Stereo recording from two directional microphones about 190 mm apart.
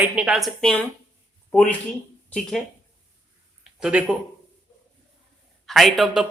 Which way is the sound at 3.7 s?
5° right (ahead or behind).